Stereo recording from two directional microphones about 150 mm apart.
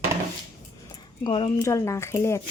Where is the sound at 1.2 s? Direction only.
35° left (ahead or behind).